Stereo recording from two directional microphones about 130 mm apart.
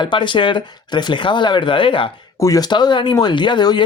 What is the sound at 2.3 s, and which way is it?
Speech, 25° left (ahead or behind).